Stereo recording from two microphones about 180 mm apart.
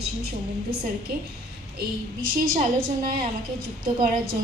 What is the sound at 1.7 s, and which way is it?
A woman's voice, 50° right (ahead or behind).